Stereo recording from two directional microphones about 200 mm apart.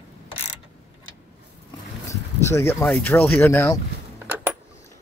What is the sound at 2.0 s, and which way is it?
Speech, 15° left (ahead or behind).